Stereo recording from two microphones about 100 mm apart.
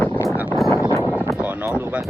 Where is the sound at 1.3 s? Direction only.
15° right (ahead or behind).